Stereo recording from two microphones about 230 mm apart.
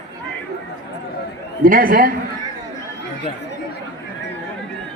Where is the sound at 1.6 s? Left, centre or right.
Right.